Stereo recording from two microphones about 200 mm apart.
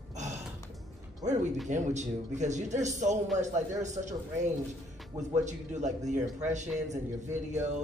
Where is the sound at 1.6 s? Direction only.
35° right (ahead or behind).